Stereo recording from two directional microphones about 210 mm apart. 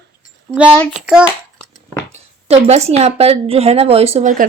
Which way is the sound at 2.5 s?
30° right (ahead or behind).